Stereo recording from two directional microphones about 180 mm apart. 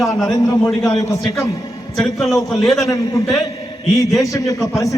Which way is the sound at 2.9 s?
20° left (ahead or behind).